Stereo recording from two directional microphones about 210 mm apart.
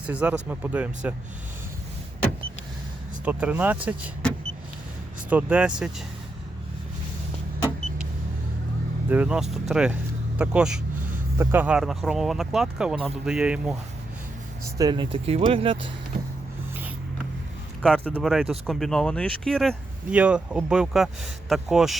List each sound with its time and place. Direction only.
0.0 s speech: 5° right (ahead or behind)
3.2 s speech: 5° right (ahead or behind)
5.3 s speech: 5° right (ahead or behind)
9.0 s speech: 5° right (ahead or behind)
14.8 s speech: 20° right (ahead or behind)
17.8 s speech: 5° left (ahead or behind)